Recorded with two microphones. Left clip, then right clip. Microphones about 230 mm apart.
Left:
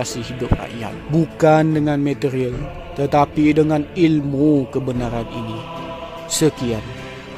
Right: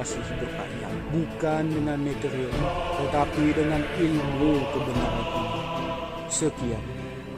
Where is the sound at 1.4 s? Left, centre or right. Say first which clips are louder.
Left 13 dB; left.